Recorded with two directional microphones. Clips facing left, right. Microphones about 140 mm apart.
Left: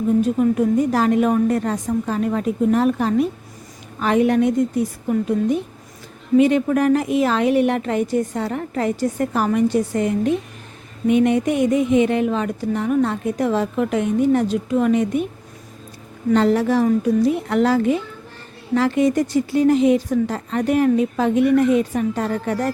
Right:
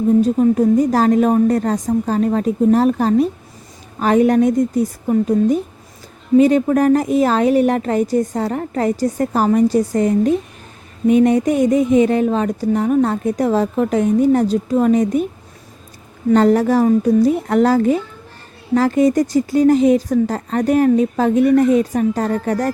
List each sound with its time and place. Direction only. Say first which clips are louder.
0.2 s speech: right 4 dB; 35° right (ahead or behind)
16.3 s speech: right 4 dB; 45° right (ahead or behind)